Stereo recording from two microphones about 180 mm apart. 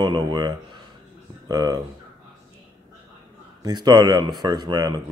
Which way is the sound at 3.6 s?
25° right (ahead or behind).